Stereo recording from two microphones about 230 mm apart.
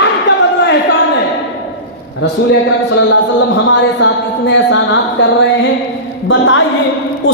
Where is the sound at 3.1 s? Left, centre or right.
Left.